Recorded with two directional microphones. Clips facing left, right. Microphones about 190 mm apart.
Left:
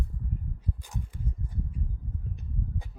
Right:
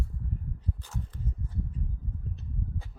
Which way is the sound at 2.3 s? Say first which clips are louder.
Left 2 dB; 15° left (ahead or behind).